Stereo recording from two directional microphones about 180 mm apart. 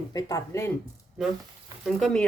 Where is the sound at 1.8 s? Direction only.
Centre (ahead or behind).